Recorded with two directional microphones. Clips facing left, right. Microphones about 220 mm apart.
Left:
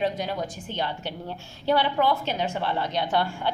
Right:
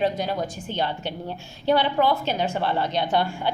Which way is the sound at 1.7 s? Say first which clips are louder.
Right 2 dB; 20° right (ahead or behind).